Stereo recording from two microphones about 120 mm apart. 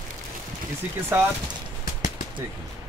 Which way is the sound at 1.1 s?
15° right (ahead or behind).